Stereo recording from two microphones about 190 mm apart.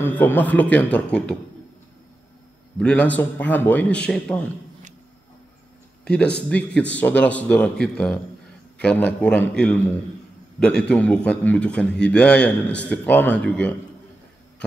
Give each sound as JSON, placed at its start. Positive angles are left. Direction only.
{"t": 0.0, "sound": "speech", "side_deg": 10}
{"t": 2.8, "sound": "speech", "side_deg": 5}
{"t": 6.0, "sound": "a man's voice", "side_deg": 5}